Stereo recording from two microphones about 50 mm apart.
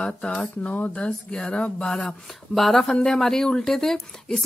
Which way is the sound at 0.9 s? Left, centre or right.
Centre.